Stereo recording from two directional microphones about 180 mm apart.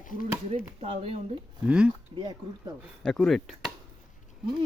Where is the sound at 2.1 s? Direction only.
25° right (ahead or behind).